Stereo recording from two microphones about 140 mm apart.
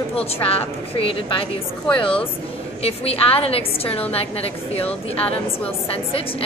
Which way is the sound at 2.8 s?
45° left (ahead or behind).